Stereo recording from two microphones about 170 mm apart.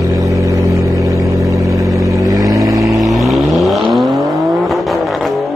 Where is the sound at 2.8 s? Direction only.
Centre (ahead or behind).